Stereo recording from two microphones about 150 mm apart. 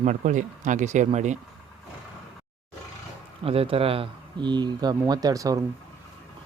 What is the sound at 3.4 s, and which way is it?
Speech, 40° right (ahead or behind).